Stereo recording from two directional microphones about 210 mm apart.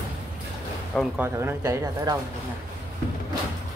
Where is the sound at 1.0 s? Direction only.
10° right (ahead or behind).